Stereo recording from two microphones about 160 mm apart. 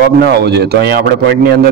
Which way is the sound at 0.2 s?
90° right.